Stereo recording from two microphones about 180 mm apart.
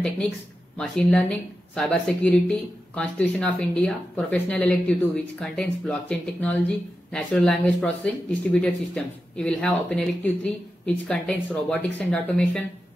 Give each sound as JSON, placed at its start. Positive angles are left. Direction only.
{"t": 0.7, "sound": "speech", "side_deg": 5}